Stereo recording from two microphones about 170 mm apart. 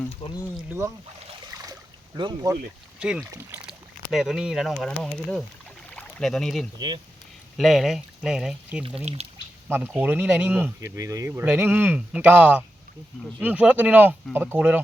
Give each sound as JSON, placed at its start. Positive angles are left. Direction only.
{"t": 0.1, "sound": "speech", "side_deg": 30}
{"t": 2.1, "sound": "speech", "side_deg": -25}
{"t": 3.0, "sound": "speech", "side_deg": -5}
{"t": 6.7, "sound": "speech", "side_deg": -25}
{"t": 7.5, "sound": "speech", "side_deg": 0}
{"t": 9.1, "sound": "speech", "side_deg": -40}
{"t": 9.6, "sound": "speech", "side_deg": -10}